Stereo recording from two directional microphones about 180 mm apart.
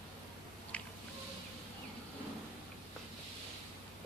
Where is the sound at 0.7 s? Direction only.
5° left (ahead or behind).